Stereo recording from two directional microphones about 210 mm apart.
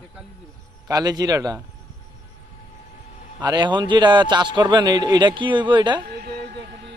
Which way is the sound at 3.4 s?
20° right (ahead or behind).